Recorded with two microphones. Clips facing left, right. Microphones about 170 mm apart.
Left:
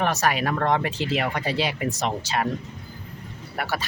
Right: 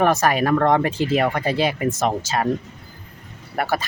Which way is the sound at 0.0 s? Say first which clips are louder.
Right 5 dB; 50° right (ahead or behind).